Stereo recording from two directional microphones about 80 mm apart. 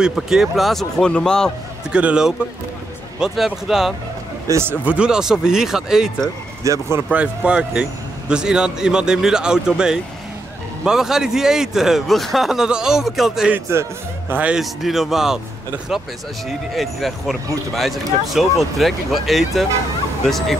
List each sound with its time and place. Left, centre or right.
0.0 s speech: centre
1.9 s speech: centre
4.5 s speech: right
4.8 s speech: centre
6.6 s speech: right
7.1 s speech: centre
14.5 s speech: centre